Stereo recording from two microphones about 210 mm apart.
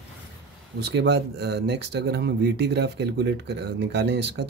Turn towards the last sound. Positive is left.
turn(degrees=-55)  # may be behind; listen again after turning